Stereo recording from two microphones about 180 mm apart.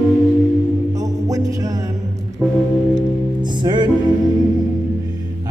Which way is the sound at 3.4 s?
25° right (ahead or behind).